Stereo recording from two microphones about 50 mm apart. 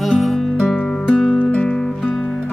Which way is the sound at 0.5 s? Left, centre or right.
Centre.